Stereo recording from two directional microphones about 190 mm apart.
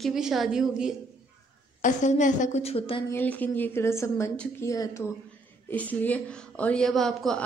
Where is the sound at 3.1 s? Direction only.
10° left (ahead or behind).